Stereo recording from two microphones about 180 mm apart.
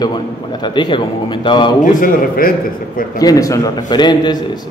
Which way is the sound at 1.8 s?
50° left (ahead or behind).